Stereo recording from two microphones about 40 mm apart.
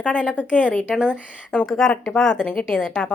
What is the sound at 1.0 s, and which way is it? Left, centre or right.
Speech, left.